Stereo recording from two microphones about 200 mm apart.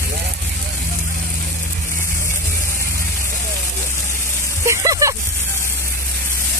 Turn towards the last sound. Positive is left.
turn(degrees=-15)  # may be behind; listen again after turning